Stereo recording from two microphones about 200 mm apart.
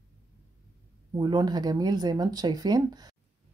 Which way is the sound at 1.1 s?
20° right (ahead or behind).